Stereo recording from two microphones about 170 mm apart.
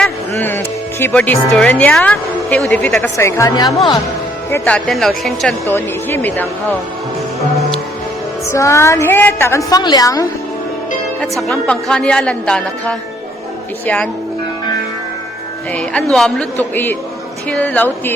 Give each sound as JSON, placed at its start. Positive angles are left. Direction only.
{"t": 0.0, "sound": "speech", "side_deg": 10}
{"t": 4.5, "sound": "a woman's voice", "side_deg": 10}
{"t": 5.6, "sound": "a woman's voice", "side_deg": 10}
{"t": 8.4, "sound": "a woman's voice", "side_deg": 15}
{"t": 11.2, "sound": "a woman's voice", "side_deg": 0}
{"t": 15.7, "sound": "a woman's voice", "side_deg": 5}